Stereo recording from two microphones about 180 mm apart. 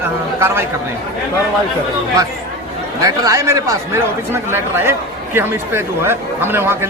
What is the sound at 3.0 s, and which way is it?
A man's voice, 20° right (ahead or behind).